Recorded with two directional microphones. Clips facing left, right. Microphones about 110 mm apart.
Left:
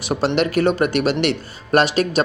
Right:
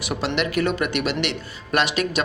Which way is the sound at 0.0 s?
35° left (ahead or behind).